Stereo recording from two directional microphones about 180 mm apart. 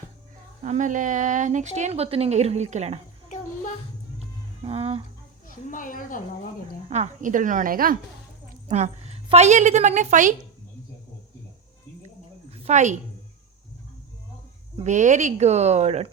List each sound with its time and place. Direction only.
0.6 s speech: 45° right (ahead or behind)
4.6 s speech: 35° right (ahead or behind)
5.5 s speech: 50° left (ahead or behind)
6.8 s a woman's voice: 40° right (ahead or behind)
8.6 s a woman's voice: 35° right (ahead or behind)
12.0 s a sound: 35° right (ahead or behind)
14.8 s speech: 40° right (ahead or behind)